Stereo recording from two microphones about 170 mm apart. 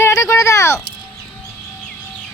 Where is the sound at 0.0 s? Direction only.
20° left (ahead or behind).